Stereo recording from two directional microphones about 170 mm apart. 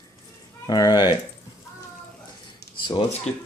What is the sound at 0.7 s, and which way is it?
Speech, 20° left (ahead or behind).